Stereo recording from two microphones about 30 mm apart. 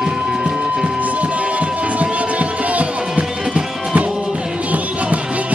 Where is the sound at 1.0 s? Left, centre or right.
Right.